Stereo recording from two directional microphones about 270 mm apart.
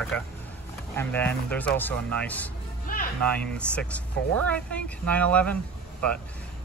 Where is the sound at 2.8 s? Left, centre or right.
Left.